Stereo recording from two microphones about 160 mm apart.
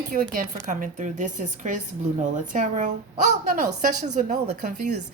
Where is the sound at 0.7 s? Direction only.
50° right (ahead or behind).